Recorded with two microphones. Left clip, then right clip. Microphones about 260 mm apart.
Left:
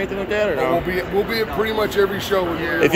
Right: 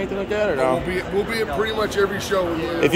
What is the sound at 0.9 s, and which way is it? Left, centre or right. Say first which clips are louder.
Speech: left 2 dB; left.